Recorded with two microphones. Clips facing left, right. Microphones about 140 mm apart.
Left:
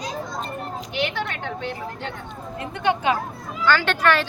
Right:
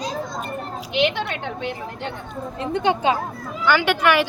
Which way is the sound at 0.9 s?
20° right (ahead or behind).